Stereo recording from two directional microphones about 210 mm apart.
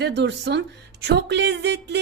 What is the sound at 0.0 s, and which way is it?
A woman's voice, 55° right (ahead or behind).